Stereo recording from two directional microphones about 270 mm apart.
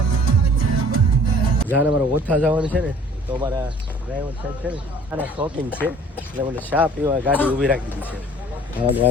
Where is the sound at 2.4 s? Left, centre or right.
Centre.